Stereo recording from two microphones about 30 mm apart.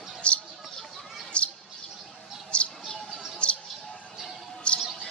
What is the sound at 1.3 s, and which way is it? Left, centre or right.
Bird, left.